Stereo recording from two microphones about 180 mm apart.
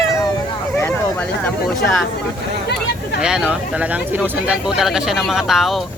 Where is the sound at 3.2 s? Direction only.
5° right (ahead or behind).